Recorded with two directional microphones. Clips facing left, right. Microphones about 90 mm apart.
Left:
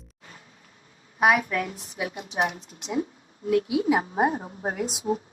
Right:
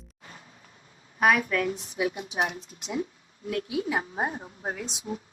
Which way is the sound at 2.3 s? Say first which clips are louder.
Left 2 dB; 35° left (ahead or behind).